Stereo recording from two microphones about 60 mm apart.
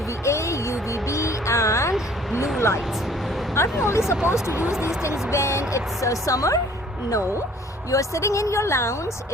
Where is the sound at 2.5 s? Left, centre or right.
Left.